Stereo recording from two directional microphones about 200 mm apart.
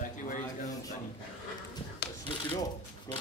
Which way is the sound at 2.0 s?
55° left (ahead or behind).